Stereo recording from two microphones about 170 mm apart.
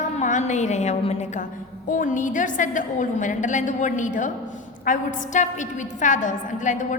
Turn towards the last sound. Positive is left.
turn(degrees=50)  # may be behind; listen again after turning